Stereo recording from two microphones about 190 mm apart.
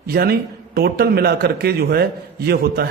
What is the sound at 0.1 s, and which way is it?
A man's voice, 55° right (ahead or behind).